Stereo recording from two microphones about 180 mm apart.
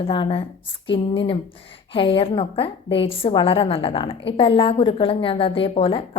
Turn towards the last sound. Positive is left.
turn(degrees=30)  # may be behind; listen again after turning